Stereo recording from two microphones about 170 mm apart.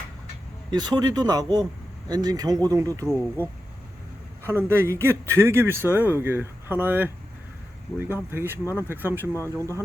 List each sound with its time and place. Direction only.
0.7 s speech: 25° right (ahead or behind)
4.4 s a man's voice: 15° right (ahead or behind)